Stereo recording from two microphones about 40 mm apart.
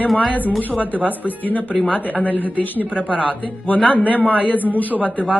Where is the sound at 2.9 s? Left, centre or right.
Right.